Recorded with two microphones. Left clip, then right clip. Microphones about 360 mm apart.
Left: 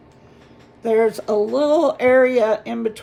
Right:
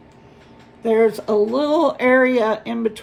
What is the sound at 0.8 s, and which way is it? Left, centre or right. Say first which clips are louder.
Speech: right 1 dB; centre.